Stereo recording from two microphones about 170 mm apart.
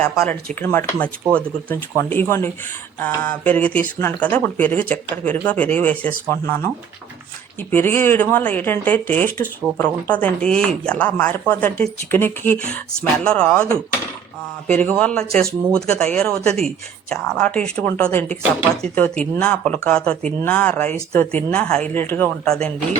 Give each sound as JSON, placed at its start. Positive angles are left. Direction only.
{"t": 0.0, "sound": "speech", "side_deg": 5}
{"t": 7.7, "sound": "speech", "side_deg": 10}
{"t": 14.7, "sound": "speech", "side_deg": 10}